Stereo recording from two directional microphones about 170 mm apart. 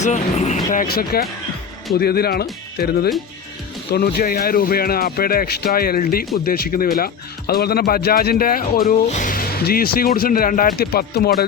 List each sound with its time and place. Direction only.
0.0 s speech: 40° left (ahead or behind); by 11.4 s 65° left (ahead or behind)